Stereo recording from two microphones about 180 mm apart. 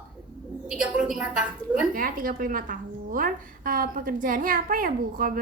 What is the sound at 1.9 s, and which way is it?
A woman's voice, 50° right (ahead or behind).